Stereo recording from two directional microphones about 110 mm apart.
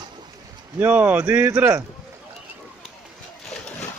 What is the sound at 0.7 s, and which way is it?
Speech, 15° right (ahead or behind).